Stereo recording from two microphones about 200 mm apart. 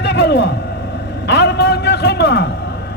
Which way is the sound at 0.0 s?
55° left (ahead or behind).